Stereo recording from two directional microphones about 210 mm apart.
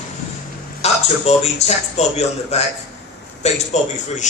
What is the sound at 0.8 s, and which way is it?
Speech, 30° left (ahead or behind).